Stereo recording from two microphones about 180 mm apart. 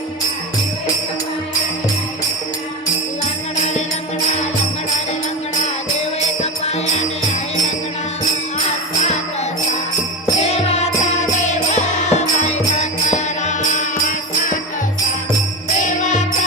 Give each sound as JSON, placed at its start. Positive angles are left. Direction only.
{"t": 10.4, "sound": "music", "side_deg": 35}
{"t": 15.8, "sound": "music", "side_deg": 45}